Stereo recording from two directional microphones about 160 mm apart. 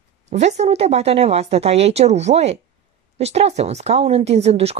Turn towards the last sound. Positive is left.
turn(degrees=-40)  # may be behind; listen again after turning